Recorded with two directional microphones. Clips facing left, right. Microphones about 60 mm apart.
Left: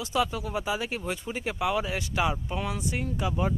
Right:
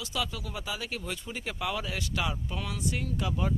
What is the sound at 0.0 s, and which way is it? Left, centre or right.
Speech, left.